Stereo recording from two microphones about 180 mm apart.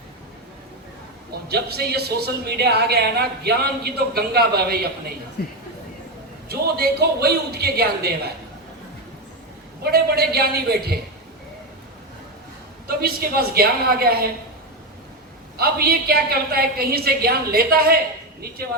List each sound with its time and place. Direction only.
1.5 s a woman's voice: 60° right (ahead or behind)
5.4 s speech: 60° left (ahead or behind)
6.5 s a woman's voice: 60° right (ahead or behind)
9.8 s a woman's voice: 60° right (ahead or behind)
13.0 s a woman's voice: 60° right (ahead or behind)
15.5 s a woman's voice: 60° right (ahead or behind)